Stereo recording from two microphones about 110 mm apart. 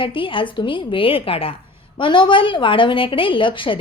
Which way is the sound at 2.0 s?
45° left (ahead or behind).